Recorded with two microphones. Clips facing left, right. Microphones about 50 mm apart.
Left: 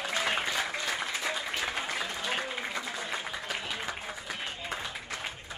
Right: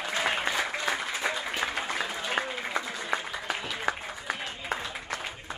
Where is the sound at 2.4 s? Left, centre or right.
Right.